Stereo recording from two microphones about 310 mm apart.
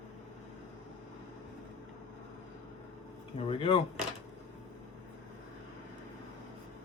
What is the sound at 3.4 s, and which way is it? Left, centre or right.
Speech, centre.